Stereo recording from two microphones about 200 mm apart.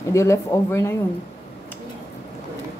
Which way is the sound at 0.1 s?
15° left (ahead or behind).